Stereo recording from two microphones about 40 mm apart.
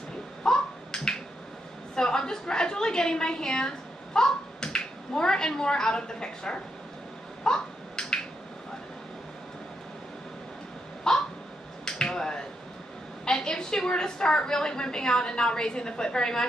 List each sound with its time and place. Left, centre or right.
0.4 s a sound: centre
2.0 s a woman's voice: centre
7.4 s finger snapping: centre
11.1 s a sound: centre
11.8 s finger snapping: centre
13.2 s a woman's voice: centre